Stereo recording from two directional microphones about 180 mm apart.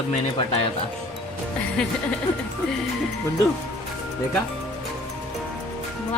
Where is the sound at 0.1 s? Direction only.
35° left (ahead or behind).